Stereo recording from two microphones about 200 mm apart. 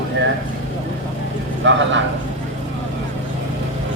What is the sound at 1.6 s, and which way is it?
Speech, 65° right (ahead or behind).